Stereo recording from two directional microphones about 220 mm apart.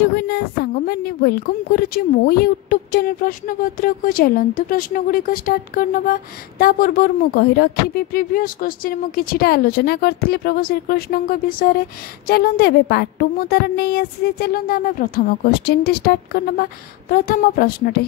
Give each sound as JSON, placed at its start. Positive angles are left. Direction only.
{"t": 0.0, "sound": "a woman's voice", "side_deg": 45}